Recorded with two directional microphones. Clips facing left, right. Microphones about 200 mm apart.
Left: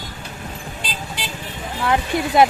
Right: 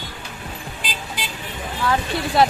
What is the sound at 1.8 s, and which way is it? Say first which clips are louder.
Speech: left 2 dB; 20° left (ahead or behind).